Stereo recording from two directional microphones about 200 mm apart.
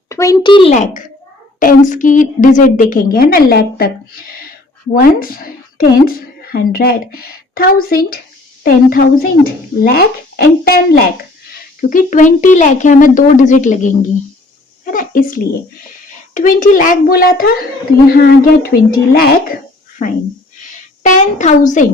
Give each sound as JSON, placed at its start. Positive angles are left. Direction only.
{"t": 0.1, "sound": "a woman's voice", "side_deg": 15}
{"t": 16.3, "sound": "a woman's voice", "side_deg": 40}
{"t": 21.0, "sound": "speech", "side_deg": 40}